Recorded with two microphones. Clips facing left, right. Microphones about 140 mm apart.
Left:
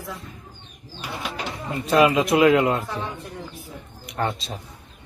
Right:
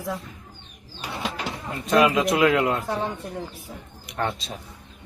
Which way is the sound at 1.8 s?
Centre (ahead or behind).